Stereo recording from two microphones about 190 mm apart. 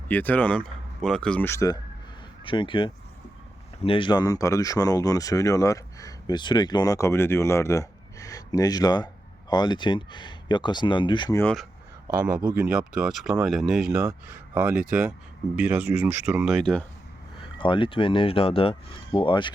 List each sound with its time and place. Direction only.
0.1 s speech: 10° left (ahead or behind)
2.4 s speech: 25° left (ahead or behind)
11.3 s speech: 5° left (ahead or behind)
12.2 s speech: 5° right (ahead or behind)
13.9 s speech: 15° right (ahead or behind); by 16.8 s centre (ahead or behind)
17.6 s speech: 25° left (ahead or behind)